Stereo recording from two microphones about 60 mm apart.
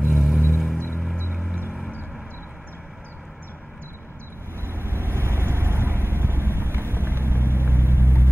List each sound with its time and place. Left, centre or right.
0.0 s vehicle: centre
4.6 s vehicle: right